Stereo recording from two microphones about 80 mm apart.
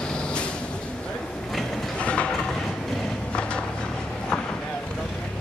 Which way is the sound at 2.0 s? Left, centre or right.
Centre.